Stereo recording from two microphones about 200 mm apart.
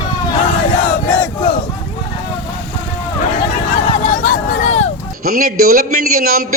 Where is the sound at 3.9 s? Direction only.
40° left (ahead or behind).